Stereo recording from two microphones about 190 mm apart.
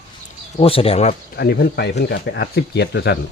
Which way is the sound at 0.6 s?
30° left (ahead or behind).